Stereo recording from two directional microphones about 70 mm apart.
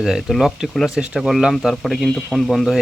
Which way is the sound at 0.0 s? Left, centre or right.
Centre.